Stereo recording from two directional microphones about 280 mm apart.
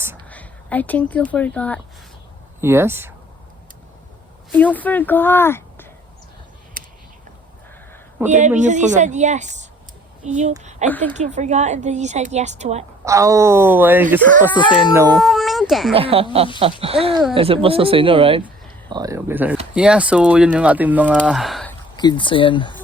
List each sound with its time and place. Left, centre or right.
0.3 s speech: centre
2.6 s speech: centre
4.5 s speech: centre
6.8 s a sound: right
8.3 s a woman's voice: right
10.8 s speech: centre
11.2 s a woman's voice: right
13.1 s speech: centre
14.5 s speech: centre
14.9 s speech: centre
15.2 s speech: centre
15.9 s a woman's voice: centre
21.9 s speech: centre